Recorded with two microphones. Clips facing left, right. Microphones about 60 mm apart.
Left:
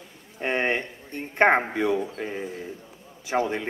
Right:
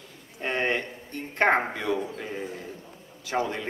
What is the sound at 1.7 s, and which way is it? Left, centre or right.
A man's voice, centre.